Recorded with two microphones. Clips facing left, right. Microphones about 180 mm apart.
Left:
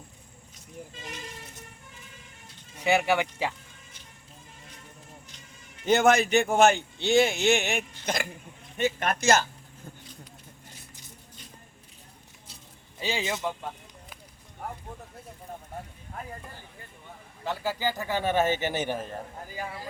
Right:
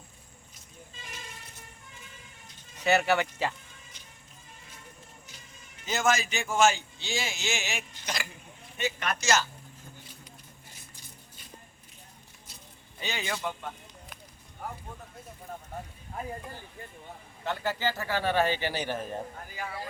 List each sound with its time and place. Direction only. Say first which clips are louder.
2.7 s speech: left 1 dB; 15° left (ahead or behind)
5.8 s a man's voice: left 7 dB; 60° left (ahead or behind)
13.0 s a man's voice: left 4 dB; 30° left (ahead or behind)
17.4 s a man's voice: left 1 dB; 5° left (ahead or behind); by 18.9 s 20° left (ahead or behind)